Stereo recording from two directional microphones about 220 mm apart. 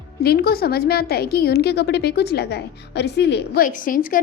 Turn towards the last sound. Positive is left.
turn(degrees=40)  # may be behind; listen again after turning